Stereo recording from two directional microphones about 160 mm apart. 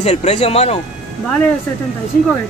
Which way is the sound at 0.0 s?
40° left (ahead or behind).